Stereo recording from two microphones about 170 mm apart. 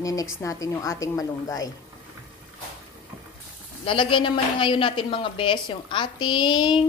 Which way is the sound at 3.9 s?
30° left (ahead or behind).